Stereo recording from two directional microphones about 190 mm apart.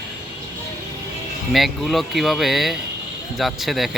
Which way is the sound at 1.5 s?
Centre (ahead or behind).